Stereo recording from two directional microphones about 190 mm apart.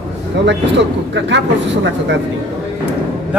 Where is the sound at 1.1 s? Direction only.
70° right (ahead or behind).